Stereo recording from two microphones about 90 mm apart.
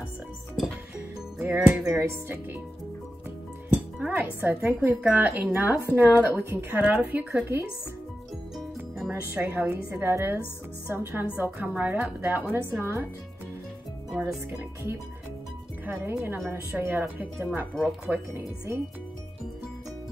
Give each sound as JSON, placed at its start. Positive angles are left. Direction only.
{"t": 1.4, "sound": "speech", "side_deg": -20}
{"t": 4.1, "sound": "speech", "side_deg": -20}
{"t": 8.5, "sound": "music", "side_deg": -5}
{"t": 9.1, "sound": "speech", "side_deg": -25}
{"t": 14.1, "sound": "speech", "side_deg": -10}
{"t": 16.1, "sound": "speech", "side_deg": -25}
{"t": 17.0, "sound": "speech", "side_deg": -10}
{"t": 18.0, "sound": "speech", "side_deg": -30}